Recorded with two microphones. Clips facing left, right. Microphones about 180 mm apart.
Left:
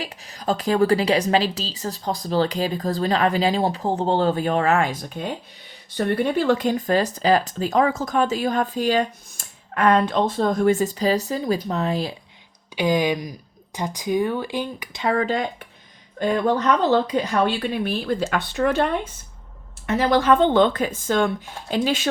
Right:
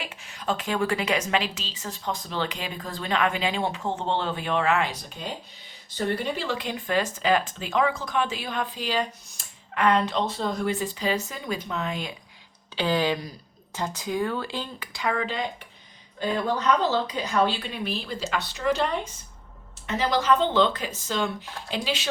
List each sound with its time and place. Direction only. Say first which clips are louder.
0.0 s a woman's voice: left 5 dB; 35° left (ahead or behind)
12.7 s speech: left 4 dB; 15° left (ahead or behind)
15.0 s speech: left 6 dB; 40° left (ahead or behind)
20.1 s speech: left 5 dB; 55° left (ahead or behind)